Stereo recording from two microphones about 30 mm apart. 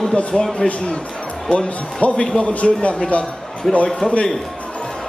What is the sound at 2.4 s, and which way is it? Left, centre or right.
Speech, left.